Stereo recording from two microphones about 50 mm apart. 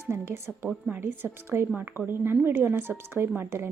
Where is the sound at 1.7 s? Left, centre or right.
Right.